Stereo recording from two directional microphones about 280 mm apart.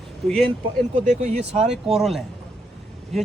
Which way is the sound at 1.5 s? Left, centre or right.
Centre.